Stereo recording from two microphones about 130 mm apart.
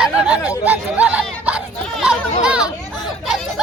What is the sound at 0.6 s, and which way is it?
Chatter, 10° right (ahead or behind).